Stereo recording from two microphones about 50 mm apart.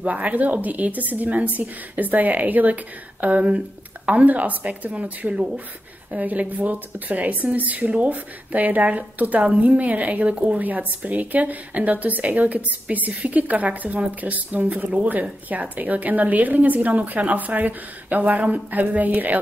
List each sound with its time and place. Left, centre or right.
0.0 s a woman's voice: right